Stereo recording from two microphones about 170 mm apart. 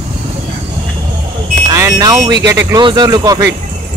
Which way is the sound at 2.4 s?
20° right (ahead or behind).